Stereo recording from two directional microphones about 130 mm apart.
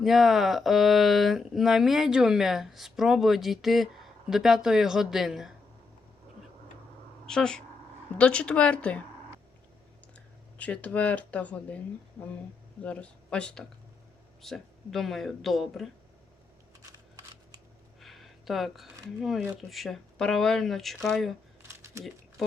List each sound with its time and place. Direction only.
0.0 s speech: centre (ahead or behind)
7.3 s speech: 5° left (ahead or behind)
10.6 s speech: 10° left (ahead or behind)
12.8 s speech: 10° left (ahead or behind)
18.0 s a sound: centre (ahead or behind)
19.6 s speech: centre (ahead or behind)
21.7 s a sound: 20° right (ahead or behind)